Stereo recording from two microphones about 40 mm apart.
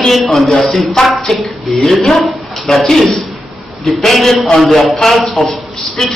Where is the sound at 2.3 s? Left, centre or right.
Centre.